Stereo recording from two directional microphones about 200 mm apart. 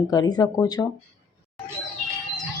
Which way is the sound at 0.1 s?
20° left (ahead or behind).